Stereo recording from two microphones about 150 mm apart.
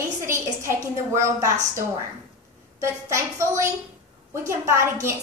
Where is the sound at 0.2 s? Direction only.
20° right (ahead or behind).